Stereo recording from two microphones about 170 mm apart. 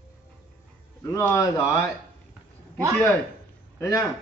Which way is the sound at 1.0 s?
15° left (ahead or behind).